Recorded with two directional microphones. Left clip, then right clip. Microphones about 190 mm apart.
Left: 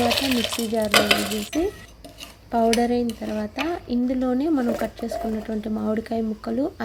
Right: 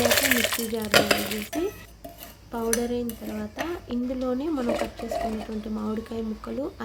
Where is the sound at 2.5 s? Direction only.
30° left (ahead or behind).